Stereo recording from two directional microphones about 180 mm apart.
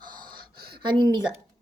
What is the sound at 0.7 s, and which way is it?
Speech, 25° right (ahead or behind).